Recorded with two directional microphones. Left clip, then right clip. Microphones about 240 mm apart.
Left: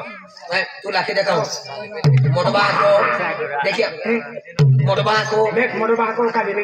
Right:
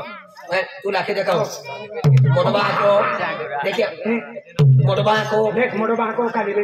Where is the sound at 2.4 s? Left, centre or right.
Right.